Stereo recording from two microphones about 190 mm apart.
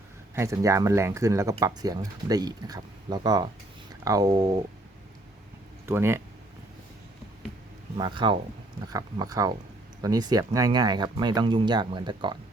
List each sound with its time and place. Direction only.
0.3 s speech: 15° right (ahead or behind)
5.8 s speech: 10° right (ahead or behind)
7.9 s speech: 25° right (ahead or behind)